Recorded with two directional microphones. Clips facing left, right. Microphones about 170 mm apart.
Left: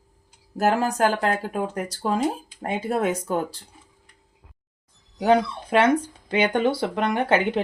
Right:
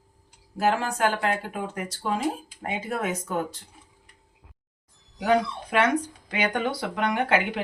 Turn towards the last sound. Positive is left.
turn(degrees=30)  # may be behind; listen again after turning